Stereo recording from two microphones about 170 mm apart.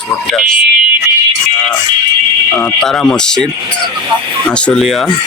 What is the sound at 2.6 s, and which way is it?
Speech, 5° left (ahead or behind).